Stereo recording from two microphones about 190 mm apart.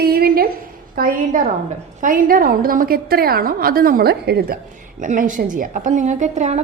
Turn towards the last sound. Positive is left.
turn(degrees=-35)  # may be behind; listen again after turning